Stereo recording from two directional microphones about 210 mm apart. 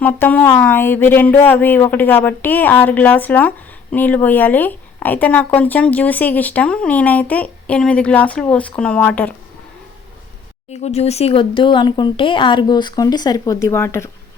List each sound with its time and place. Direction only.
0.0 s speech: 10° left (ahead or behind)
10.7 s speech: 30° left (ahead or behind); by 14.1 s 10° left (ahead or behind)